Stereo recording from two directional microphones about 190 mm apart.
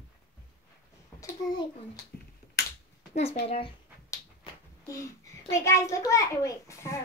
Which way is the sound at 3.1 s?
35° left (ahead or behind).